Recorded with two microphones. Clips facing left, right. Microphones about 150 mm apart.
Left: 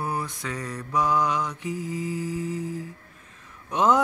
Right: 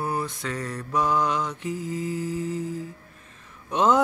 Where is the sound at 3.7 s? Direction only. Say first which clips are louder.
Even; 10° left (ahead or behind).